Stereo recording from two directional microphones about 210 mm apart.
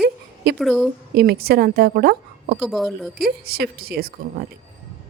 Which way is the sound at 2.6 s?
Centre (ahead or behind).